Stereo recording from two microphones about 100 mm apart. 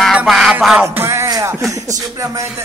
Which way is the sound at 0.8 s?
25° right (ahead or behind).